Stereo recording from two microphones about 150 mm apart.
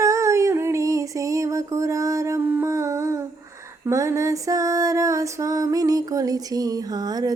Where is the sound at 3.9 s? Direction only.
20° right (ahead or behind).